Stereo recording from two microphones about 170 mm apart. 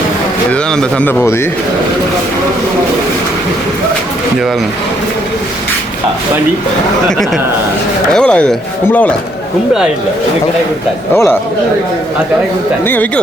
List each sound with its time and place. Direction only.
0.5 s speech: 5° left (ahead or behind)
8.1 s speech: 5° left (ahead or behind)
11.1 s speech: 15° left (ahead or behind)
12.8 s speech: 10° left (ahead or behind)